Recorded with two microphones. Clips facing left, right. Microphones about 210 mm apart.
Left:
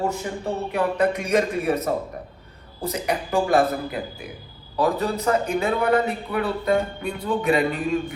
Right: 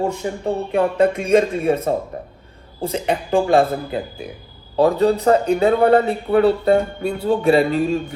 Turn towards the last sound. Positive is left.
turn(degrees=-30)  # may be behind; listen again after turning